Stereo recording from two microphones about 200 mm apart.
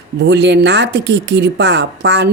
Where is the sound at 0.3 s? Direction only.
60° right (ahead or behind).